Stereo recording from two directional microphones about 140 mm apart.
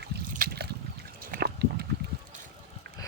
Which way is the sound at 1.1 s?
90° right.